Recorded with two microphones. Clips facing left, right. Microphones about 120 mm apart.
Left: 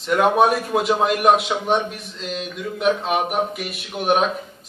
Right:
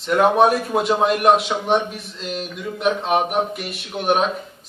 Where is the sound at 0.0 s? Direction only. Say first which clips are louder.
Right 1 dB; centre (ahead or behind).